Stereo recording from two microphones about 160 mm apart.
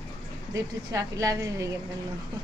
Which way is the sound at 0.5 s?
20° right (ahead or behind).